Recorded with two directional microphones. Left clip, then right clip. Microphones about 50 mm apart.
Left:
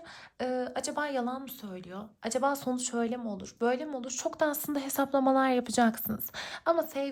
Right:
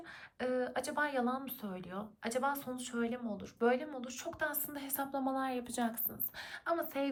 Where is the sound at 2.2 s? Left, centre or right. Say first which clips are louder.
Left 6 dB; left.